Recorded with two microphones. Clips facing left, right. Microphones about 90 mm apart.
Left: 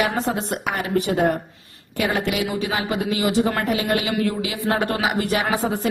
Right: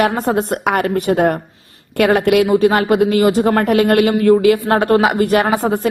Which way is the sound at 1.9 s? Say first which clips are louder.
Right 10 dB; 60° right (ahead or behind).